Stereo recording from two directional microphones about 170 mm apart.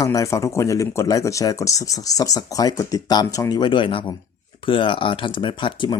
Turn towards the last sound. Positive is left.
turn(degrees=30)  # may be behind; listen again after turning